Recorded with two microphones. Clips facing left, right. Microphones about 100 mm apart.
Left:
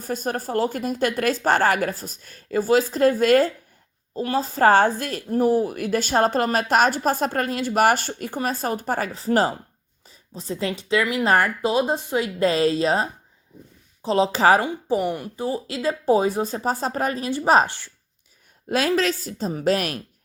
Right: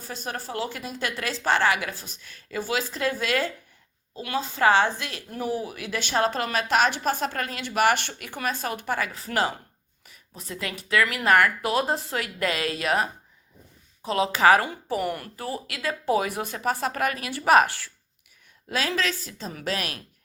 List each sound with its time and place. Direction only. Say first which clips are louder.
0.0 s a woman's voice: left 7 dB; 45° left (ahead or behind); by 17.9 s 25° left (ahead or behind)
18.7 s a woman's voice: left 6 dB; 45° left (ahead or behind)